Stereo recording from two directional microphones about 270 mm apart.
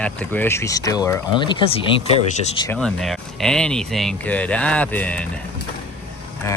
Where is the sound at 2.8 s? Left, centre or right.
Centre.